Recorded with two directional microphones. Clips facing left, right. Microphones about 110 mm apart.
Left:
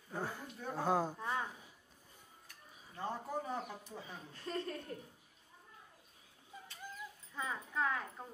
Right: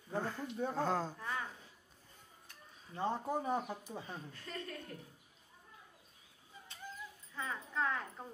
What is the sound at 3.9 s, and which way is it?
Speech, 35° right (ahead or behind).